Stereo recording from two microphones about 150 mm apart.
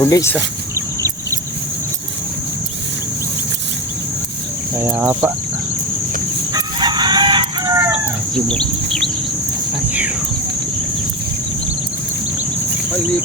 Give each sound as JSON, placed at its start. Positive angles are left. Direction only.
{"t": 0.0, "sound": "speech", "side_deg": 20}
{"t": 4.8, "sound": "speech", "side_deg": -15}
{"t": 6.5, "sound": "chicken", "side_deg": -30}
{"t": 8.4, "sound": "bird", "side_deg": 5}